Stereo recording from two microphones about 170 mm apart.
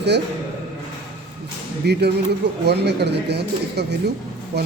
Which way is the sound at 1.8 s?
75° right (ahead or behind).